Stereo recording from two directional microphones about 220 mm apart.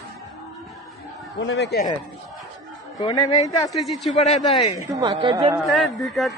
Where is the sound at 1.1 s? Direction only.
Centre (ahead or behind).